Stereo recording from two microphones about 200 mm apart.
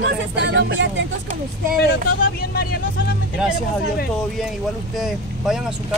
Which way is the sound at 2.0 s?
50° left (ahead or behind).